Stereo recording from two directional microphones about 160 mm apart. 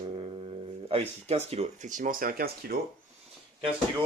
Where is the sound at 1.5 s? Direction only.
45° right (ahead or behind); by 2.7 s 65° right (ahead or behind).